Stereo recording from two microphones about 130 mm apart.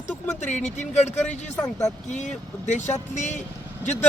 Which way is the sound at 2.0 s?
65° left (ahead or behind).